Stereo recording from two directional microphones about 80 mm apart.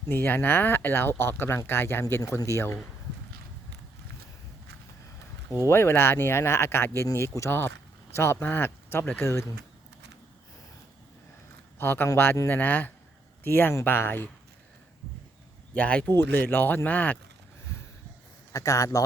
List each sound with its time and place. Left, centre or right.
0.1 s speech: left
5.5 s speech: left
11.8 s speech: left
15.7 s speech: centre
16.1 s speech: left
18.5 s a man's voice: left